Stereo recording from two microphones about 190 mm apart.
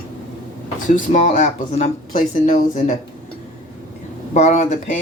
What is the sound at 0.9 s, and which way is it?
Speech, 40° left (ahead or behind).